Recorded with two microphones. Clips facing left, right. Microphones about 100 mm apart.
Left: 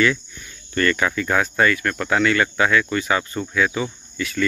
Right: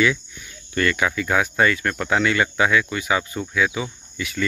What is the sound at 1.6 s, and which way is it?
Speech, 20° right (ahead or behind).